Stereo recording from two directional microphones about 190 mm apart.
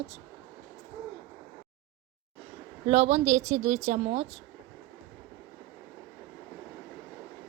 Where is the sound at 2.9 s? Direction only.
35° right (ahead or behind).